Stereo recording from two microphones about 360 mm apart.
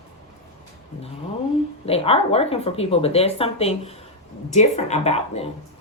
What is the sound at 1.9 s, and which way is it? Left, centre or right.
Speech, centre.